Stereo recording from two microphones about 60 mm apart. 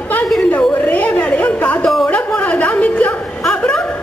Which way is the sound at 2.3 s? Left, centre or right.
Left.